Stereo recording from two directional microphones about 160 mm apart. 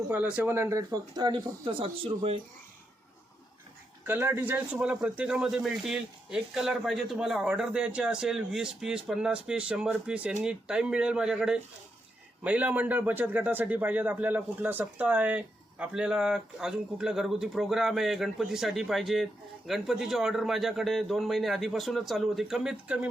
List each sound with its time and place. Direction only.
0.1 s speech: 10° right (ahead or behind); by 2.4 s 35° right (ahead or behind)
4.0 s a man's voice: 15° right (ahead or behind)